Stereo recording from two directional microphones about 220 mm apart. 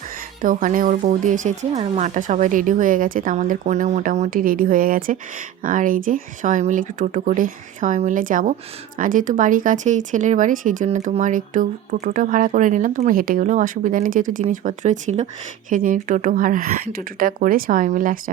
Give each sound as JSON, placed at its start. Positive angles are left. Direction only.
{"t": 0.4, "sound": "speech", "side_deg": -40}